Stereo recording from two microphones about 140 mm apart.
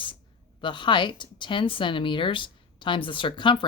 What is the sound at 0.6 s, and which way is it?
Speech, 35° left (ahead or behind).